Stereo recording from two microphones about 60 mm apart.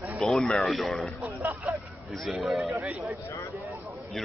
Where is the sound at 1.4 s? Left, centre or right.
Right.